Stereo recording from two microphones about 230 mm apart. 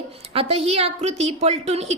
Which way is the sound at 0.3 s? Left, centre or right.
Right.